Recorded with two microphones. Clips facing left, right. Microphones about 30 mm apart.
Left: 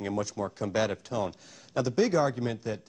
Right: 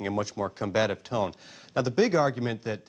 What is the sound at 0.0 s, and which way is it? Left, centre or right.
A man's voice, right.